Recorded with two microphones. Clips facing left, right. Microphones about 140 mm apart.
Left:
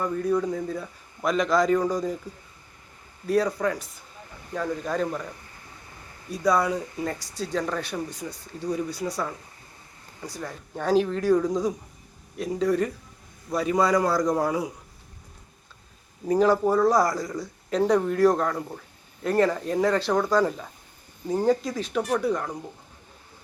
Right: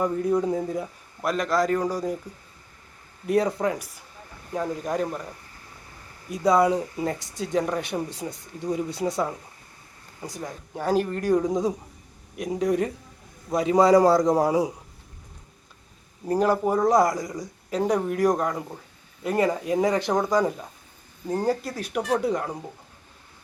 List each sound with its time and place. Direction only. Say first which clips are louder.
0.0 s speech: right 2 dB; 20° right (ahead or behind)
1.2 s a man's voice: left 1 dB; 5° right (ahead or behind)
3.2 s speech: right 1 dB; 25° right (ahead or behind)
6.3 s speech: right 3 dB; 20° right (ahead or behind)
16.2 s speech: left 2 dB; 5° right (ahead or behind)
21.2 s speech: left 2 dB; 5° right (ahead or behind)
22.2 s speech: even; 20° right (ahead or behind)